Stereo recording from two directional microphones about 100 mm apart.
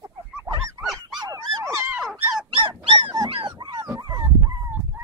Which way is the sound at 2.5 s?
60° right (ahead or behind).